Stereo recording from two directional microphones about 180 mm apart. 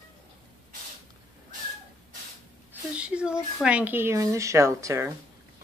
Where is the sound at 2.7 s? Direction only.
5° right (ahead or behind).